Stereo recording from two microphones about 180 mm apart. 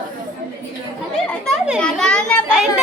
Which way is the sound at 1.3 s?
Centre (ahead or behind).